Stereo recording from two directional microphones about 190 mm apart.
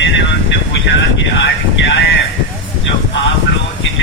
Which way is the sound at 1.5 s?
75° left (ahead or behind).